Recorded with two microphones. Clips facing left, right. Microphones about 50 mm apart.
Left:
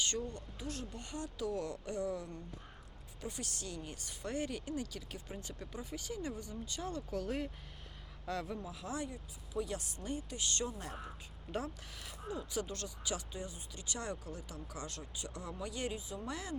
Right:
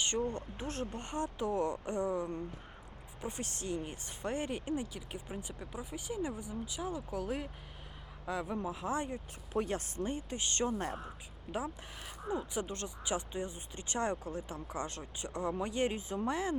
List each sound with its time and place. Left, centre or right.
0.2 s speech: right; by 8.5 s centre
8.6 s speech: right
11.5 s speech: centre